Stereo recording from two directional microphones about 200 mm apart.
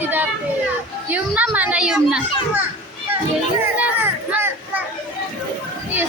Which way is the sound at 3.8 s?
10° right (ahead or behind).